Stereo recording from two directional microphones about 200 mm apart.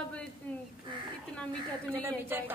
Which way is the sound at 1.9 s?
10° right (ahead or behind).